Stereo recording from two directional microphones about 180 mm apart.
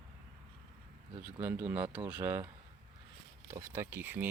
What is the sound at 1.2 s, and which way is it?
Speech, 10° right (ahead or behind).